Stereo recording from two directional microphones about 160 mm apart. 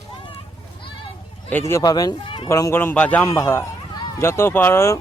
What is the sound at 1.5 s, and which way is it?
Speech, 15° left (ahead or behind).